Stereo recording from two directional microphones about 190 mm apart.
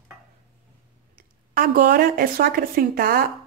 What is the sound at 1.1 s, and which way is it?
Speech, 45° right (ahead or behind).